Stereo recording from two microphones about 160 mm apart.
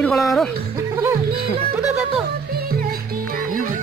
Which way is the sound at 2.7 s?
70° right (ahead or behind).